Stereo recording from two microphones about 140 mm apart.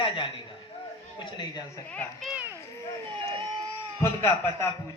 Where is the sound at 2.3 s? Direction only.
10° right (ahead or behind).